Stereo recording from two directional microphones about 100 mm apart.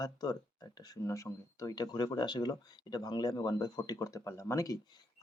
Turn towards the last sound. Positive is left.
turn(degrees=35)  # may be behind; listen again after turning